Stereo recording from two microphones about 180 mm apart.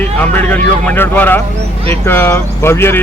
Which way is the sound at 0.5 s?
10° left (ahead or behind).